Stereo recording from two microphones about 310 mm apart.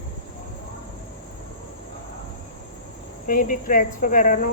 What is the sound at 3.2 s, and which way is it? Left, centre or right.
Speech, left.